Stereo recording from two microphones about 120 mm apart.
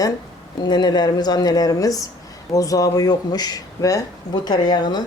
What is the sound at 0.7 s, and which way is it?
Speech, 35° left (ahead or behind).